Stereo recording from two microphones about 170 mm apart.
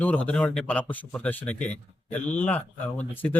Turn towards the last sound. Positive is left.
turn(degrees=10)  # may be behind; listen again after turning